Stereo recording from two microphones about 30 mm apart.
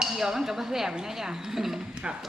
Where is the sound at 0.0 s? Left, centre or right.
Centre.